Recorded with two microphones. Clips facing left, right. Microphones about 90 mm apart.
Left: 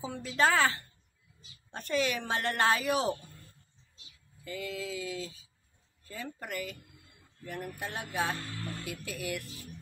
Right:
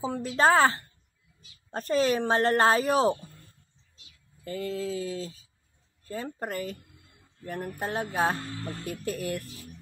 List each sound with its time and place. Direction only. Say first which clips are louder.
0.0 s speech: right 5 dB; 35° right (ahead or behind)
4.5 s speech: right 6 dB; 40° right (ahead or behind)